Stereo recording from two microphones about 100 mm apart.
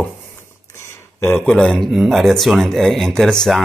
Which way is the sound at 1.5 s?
10° left (ahead or behind).